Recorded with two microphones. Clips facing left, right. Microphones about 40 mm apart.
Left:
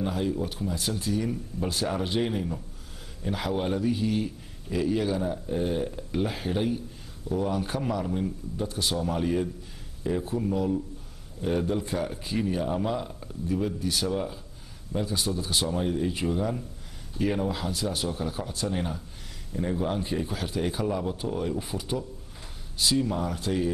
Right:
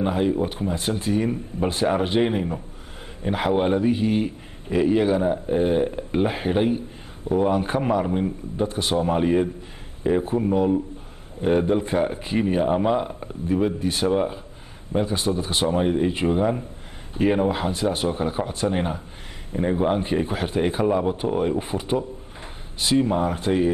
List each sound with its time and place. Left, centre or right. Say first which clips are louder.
0.0 s a man's voice: right 7 dB; right